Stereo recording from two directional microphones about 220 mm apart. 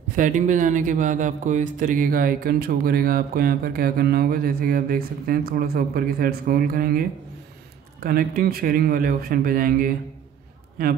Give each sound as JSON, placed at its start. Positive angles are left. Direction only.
{"t": 0.1, "sound": "speech", "side_deg": -35}